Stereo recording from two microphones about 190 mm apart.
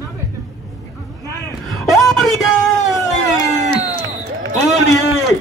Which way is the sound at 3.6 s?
40° right (ahead or behind).